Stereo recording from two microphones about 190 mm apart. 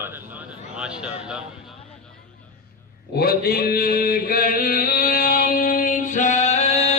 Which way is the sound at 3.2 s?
55° left (ahead or behind).